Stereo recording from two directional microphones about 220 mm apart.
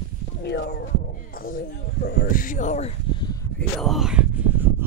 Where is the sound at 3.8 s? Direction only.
Centre (ahead or behind).